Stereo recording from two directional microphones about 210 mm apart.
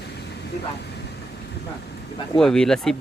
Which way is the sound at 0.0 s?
50° left (ahead or behind).